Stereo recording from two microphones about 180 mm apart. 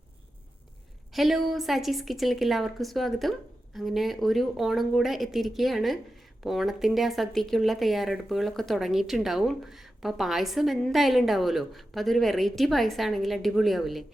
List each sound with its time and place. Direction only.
1.1 s speech: centre (ahead or behind)